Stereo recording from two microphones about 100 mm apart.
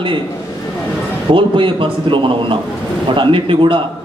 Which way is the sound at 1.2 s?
60° right (ahead or behind).